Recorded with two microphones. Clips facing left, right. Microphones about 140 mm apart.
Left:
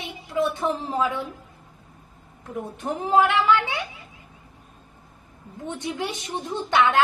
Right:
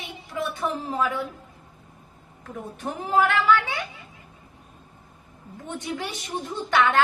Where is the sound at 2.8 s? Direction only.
20° left (ahead or behind).